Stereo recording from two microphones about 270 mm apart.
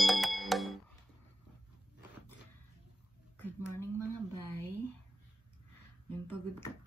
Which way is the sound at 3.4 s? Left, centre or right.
Centre.